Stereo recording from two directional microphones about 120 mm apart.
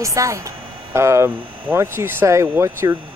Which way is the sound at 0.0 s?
25° right (ahead or behind).